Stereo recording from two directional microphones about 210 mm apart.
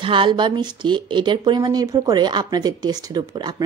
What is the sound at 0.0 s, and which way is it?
Speech, 25° right (ahead or behind).